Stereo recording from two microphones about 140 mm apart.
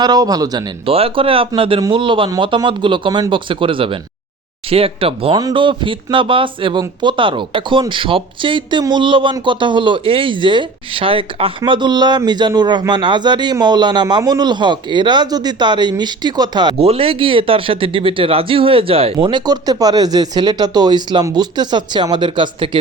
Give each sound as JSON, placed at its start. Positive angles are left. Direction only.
{"t": 0.0, "sound": "speech", "side_deg": -30}
{"t": 0.9, "sound": "speech", "side_deg": -40}
{"t": 16.8, "sound": "speech", "side_deg": -45}